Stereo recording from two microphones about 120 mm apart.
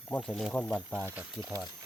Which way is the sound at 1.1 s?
15° right (ahead or behind).